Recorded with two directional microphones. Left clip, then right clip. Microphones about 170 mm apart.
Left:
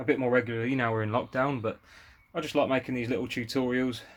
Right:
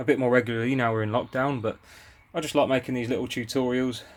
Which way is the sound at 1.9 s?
20° right (ahead or behind).